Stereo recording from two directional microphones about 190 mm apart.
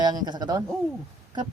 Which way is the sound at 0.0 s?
20° right (ahead or behind).